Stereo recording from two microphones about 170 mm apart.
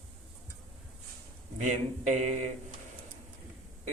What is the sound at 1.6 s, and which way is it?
Speech, 45° right (ahead or behind).